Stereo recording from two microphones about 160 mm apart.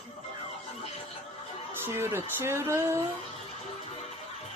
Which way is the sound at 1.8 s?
15° right (ahead or behind).